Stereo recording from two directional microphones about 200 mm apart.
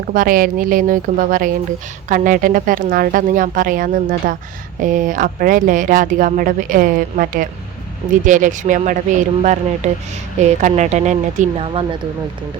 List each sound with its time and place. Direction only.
0.1 s speech: 45° right (ahead or behind); by 11.9 s 30° right (ahead or behind)